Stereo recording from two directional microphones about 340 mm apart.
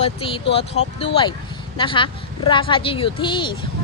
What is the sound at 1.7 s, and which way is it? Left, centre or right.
Speech, centre.